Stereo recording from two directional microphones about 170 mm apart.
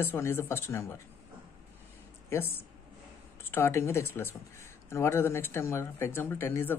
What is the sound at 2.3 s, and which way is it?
Speech, 15° left (ahead or behind).